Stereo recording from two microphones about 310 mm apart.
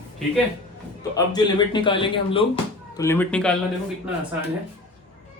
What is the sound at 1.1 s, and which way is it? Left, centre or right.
A man's voice, centre.